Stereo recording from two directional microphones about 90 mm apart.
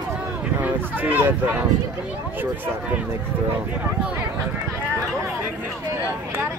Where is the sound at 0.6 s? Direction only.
20° right (ahead or behind).